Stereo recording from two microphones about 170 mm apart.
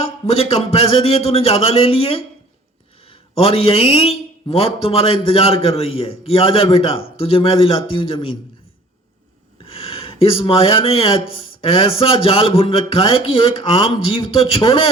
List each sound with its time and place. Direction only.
0.0 s a man's voice: 35° left (ahead or behind)
9.6 s a man's voice: 35° left (ahead or behind)